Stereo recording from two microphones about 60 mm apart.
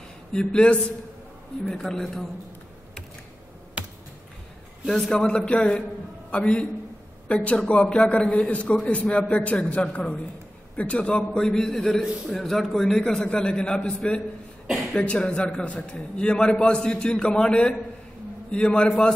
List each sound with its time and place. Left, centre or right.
0.3 s a man's voice: centre
1.8 s a man's voice: centre
3.8 s finger snapping: centre
4.8 s a man's voice: centre
5.2 s a man's voice: centre